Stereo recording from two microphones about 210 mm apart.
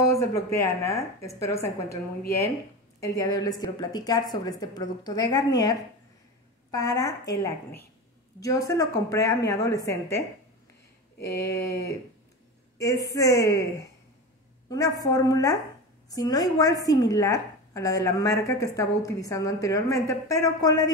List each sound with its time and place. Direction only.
0.0 s a woman's voice: 15° left (ahead or behind)